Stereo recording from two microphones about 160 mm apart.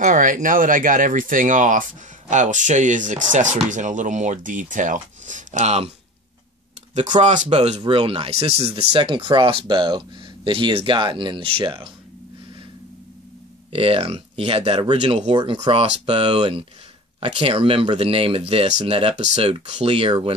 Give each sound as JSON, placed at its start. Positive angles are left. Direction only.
{"t": 0.0, "sound": "speech", "side_deg": -55}
{"t": 7.0, "sound": "speech", "side_deg": -50}
{"t": 7.5, "sound": "speech", "side_deg": -30}
{"t": 13.7, "sound": "speech", "side_deg": -35}
{"t": 15.3, "sound": "speech", "side_deg": -30}